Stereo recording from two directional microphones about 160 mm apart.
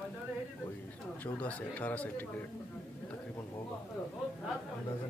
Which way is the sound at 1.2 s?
10° left (ahead or behind).